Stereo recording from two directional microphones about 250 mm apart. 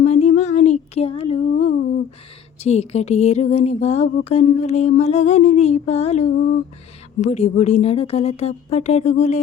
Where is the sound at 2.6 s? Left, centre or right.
Left.